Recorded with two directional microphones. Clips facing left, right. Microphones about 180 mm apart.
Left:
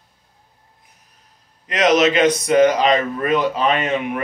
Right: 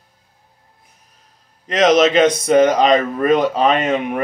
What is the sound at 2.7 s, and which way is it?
A man's voice, 40° right (ahead or behind).